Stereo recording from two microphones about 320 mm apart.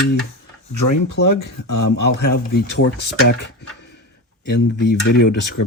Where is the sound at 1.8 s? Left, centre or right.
Left.